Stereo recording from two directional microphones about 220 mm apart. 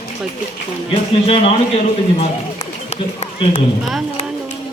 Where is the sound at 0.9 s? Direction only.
25° left (ahead or behind).